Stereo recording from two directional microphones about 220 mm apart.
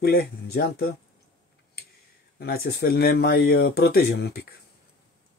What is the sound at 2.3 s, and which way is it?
Speech, 45° left (ahead or behind).